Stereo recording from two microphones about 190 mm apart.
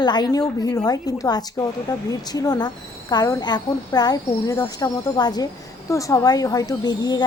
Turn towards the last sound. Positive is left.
turn(degrees=20)  # may be behind; listen again after turning